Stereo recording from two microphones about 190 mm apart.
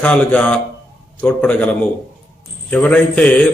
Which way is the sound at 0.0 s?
5° left (ahead or behind).